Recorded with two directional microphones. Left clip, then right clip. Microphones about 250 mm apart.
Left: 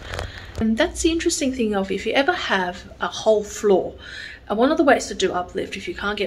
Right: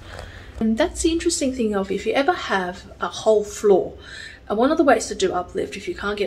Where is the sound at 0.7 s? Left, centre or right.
Centre.